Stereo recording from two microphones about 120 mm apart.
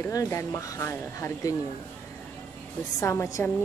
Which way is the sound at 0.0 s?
25° left (ahead or behind).